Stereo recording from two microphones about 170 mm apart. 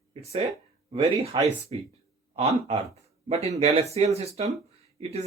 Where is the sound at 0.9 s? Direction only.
35° right (ahead or behind).